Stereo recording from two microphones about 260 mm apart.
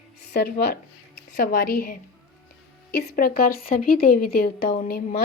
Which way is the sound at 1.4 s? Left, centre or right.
Left.